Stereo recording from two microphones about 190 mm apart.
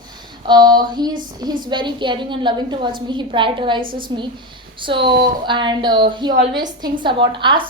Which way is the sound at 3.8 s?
50° right (ahead or behind).